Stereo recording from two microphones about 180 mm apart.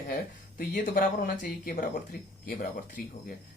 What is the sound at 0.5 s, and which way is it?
Speech, 50° left (ahead or behind).